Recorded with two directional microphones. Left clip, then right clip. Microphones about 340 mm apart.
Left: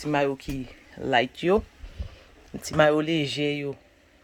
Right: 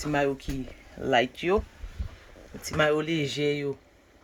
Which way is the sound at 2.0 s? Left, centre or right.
Left.